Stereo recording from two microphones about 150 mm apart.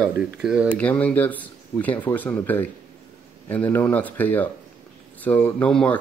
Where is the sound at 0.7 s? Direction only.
10° left (ahead or behind).